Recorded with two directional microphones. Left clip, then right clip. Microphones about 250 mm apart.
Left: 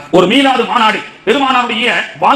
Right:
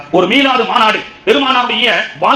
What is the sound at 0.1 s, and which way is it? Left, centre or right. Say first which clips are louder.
A man's voice: left 1 dB; left.